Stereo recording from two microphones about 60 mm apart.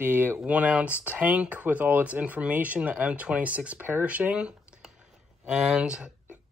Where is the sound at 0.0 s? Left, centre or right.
Right.